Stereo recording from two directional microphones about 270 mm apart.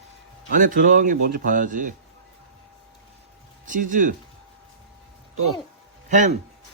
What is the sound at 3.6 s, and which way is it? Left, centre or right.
Speech, right.